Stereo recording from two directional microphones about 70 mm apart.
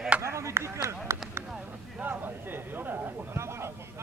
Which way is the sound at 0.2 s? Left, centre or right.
Right.